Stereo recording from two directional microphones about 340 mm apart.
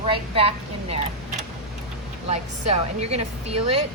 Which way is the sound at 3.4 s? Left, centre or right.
Right.